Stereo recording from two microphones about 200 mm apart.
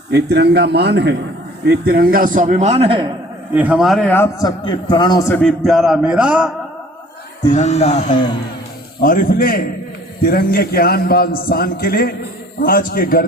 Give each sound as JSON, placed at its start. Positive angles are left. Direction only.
{"t": 0.1, "sound": "a man's voice", "side_deg": -55}
{"t": 3.5, "sound": "a man's voice", "side_deg": -5}
{"t": 5.4, "sound": "a man's voice", "side_deg": 0}
{"t": 7.5, "sound": "speech", "side_deg": 35}
{"t": 9.0, "sound": "a man's voice", "side_deg": 45}